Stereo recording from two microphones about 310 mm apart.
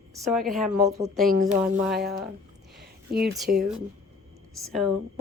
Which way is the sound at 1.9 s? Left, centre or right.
Right.